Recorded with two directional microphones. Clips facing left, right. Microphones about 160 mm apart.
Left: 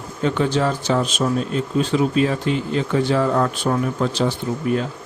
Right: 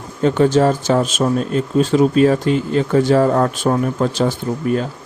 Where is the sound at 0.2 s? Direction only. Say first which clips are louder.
Right 6 dB; 40° right (ahead or behind).